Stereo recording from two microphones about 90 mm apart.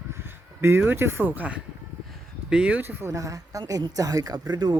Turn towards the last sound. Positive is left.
turn(degrees=-50)  # may be behind; listen again after turning